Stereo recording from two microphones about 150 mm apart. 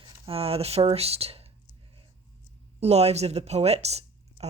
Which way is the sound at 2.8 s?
45° right (ahead or behind).